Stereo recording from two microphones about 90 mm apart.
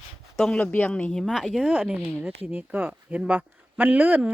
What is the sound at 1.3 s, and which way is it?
Speech, 5° right (ahead or behind).